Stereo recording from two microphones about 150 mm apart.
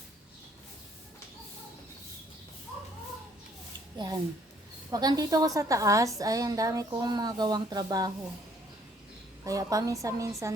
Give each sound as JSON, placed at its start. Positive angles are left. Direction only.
{"t": 3.9, "sound": "a woman's voice", "side_deg": -25}
{"t": 9.4, "sound": "a woman's voice", "side_deg": -20}